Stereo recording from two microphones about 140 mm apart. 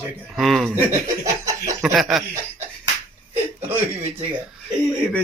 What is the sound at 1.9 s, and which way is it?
Speech, 5° right (ahead or behind).